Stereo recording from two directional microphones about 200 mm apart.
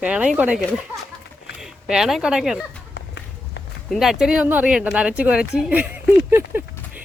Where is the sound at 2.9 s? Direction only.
60° left (ahead or behind).